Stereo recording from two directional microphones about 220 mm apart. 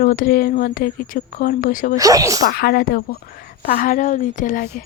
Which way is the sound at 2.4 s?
45° left (ahead or behind).